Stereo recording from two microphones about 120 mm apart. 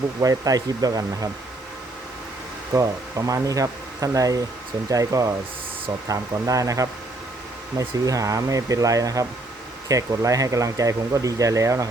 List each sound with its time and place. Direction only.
0.2 s speech: 30° right (ahead or behind)
2.7 s speech: 25° right (ahead or behind)